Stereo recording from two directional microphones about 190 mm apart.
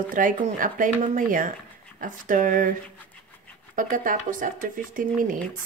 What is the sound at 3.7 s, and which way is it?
Speech, 45° right (ahead or behind).